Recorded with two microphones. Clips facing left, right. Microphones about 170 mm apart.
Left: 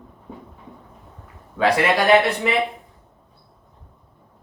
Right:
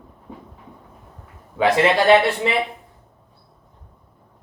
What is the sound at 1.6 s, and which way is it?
Speech, 25° right (ahead or behind).